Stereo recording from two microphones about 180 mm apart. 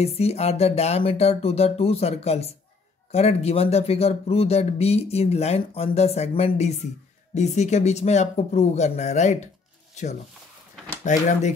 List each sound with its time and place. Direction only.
0.0 s speech: 35° left (ahead or behind)
11.1 s speech: 45° left (ahead or behind)